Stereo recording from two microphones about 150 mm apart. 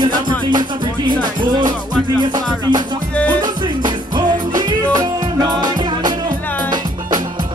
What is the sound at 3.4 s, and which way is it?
Music, 30° right (ahead or behind).